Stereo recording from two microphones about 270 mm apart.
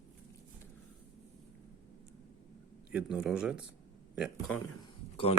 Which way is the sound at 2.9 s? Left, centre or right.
Centre.